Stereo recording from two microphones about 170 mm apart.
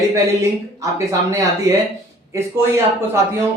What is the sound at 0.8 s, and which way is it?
Speech, 20° right (ahead or behind).